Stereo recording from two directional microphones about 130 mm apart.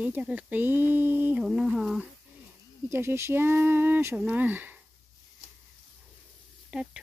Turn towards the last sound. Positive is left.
turn(degrees=-5)  # may be behind; listen again after turning